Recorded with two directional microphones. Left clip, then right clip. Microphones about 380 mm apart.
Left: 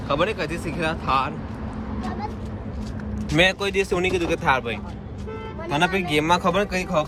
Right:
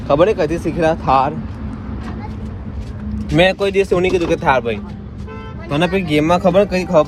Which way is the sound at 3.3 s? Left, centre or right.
Centre.